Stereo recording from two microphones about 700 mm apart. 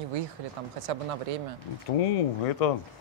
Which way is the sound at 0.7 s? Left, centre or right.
Right.